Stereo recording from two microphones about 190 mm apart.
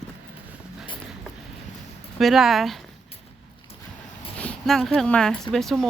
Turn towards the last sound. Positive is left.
turn(degrees=0)  # may be behind; listen again after turning